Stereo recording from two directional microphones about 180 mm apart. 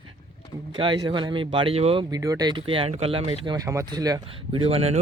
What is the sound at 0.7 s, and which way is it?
Speech, 25° right (ahead or behind).